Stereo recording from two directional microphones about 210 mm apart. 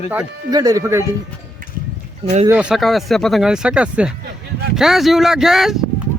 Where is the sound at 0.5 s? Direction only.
15° right (ahead or behind).